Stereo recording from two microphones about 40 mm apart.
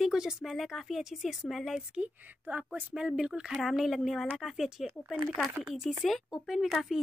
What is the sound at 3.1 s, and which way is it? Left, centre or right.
Speech, centre.